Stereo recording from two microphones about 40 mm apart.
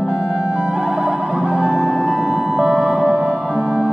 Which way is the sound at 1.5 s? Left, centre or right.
Right.